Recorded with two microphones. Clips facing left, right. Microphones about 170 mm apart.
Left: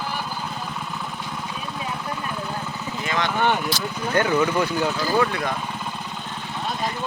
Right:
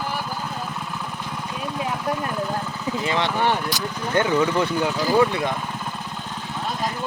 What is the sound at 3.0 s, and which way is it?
Vehicle, 30° right (ahead or behind).